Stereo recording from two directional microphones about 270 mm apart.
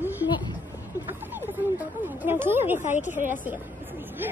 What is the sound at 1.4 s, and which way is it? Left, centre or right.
Speech, centre.